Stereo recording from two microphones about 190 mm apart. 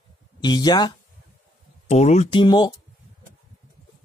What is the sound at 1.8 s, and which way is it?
Speech, 35° left (ahead or behind).